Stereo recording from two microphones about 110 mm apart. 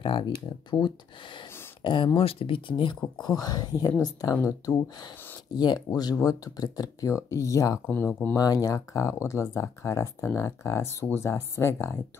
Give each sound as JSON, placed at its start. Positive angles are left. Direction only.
{"t": 0.0, "sound": "speech", "side_deg": 45}
{"t": 2.1, "sound": "speech", "side_deg": 60}
{"t": 3.3, "sound": "speech", "side_deg": 35}
{"t": 7.8, "sound": "speech", "side_deg": 20}
{"t": 8.4, "sound": "speech", "side_deg": 35}